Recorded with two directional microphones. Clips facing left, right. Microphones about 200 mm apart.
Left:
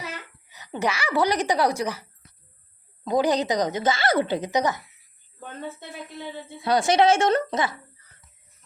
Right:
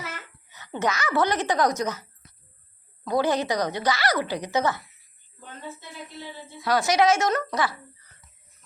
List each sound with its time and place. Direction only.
0.6 s a woman's voice: 15° left (ahead or behind)
5.4 s a woman's voice: 55° left (ahead or behind)
6.6 s a woman's voice: 25° left (ahead or behind)